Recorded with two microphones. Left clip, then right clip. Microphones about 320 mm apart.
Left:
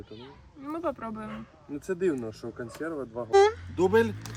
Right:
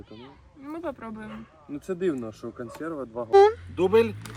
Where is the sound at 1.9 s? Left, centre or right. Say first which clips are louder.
Even; centre.